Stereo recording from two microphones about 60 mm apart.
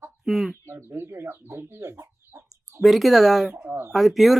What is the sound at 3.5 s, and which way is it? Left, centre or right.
Speech, right.